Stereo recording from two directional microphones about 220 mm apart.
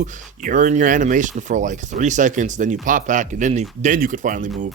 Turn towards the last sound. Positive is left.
turn(degrees=-35)  # may be behind; listen again after turning